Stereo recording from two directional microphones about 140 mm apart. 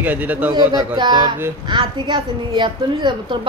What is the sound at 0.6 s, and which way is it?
A woman's voice, 30° right (ahead or behind).